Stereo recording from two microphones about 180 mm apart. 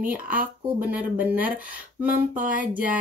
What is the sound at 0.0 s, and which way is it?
Speech, 10° right (ahead or behind).